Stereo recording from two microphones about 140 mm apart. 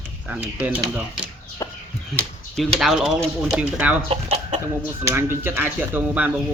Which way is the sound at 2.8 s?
Centre (ahead or behind).